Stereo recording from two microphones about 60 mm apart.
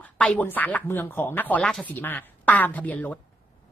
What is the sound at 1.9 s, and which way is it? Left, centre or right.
Speech, left.